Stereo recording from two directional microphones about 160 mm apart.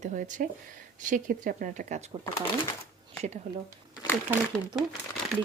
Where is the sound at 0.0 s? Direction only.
55° right (ahead or behind).